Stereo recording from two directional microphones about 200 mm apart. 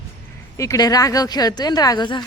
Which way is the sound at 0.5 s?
15° left (ahead or behind).